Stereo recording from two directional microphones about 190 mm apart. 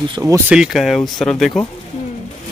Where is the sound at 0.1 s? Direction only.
15° right (ahead or behind).